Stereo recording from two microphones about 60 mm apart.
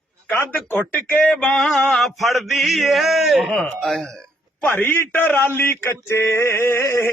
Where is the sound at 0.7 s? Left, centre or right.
Left.